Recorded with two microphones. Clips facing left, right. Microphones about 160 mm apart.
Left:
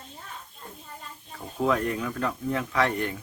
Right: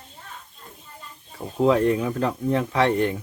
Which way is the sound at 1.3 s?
25° right (ahead or behind).